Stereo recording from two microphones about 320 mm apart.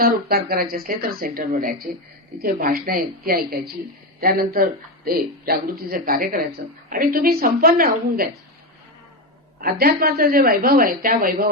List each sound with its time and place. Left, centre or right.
0.0 s a woman's voice: right
9.6 s a woman's voice: right